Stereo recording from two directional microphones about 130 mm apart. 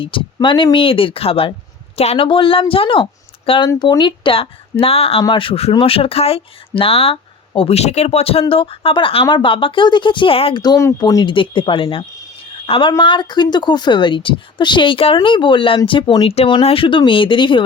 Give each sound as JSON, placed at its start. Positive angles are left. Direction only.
{"t": 0.3, "sound": "speech", "side_deg": 40}
{"t": 10.6, "sound": "a woman's voice", "side_deg": 25}